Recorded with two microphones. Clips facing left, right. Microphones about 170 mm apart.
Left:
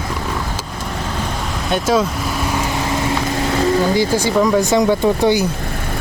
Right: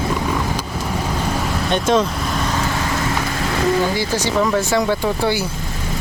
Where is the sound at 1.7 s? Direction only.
5° left (ahead or behind).